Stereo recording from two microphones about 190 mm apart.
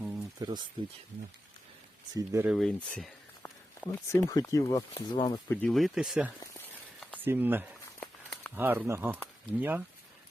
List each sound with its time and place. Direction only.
0.0 s a sound: 20° right (ahead or behind)
2.1 s speech: 15° right (ahead or behind)
2.5 s speech: 5° left (ahead or behind)
3.9 s speech: 15° left (ahead or behind)
5.5 s speech: 5° left (ahead or behind); by 7.7 s 10° right (ahead or behind)
8.0 s a sound: centre (ahead or behind)
8.5 s speech: 10° right (ahead or behind)